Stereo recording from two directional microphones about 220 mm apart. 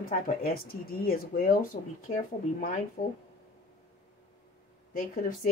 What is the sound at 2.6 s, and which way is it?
Speech, 35° left (ahead or behind).